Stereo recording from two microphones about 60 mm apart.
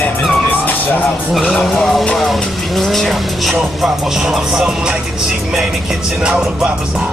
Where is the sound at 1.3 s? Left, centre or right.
Centre.